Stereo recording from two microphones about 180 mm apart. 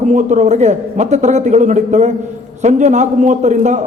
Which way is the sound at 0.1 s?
40° right (ahead or behind).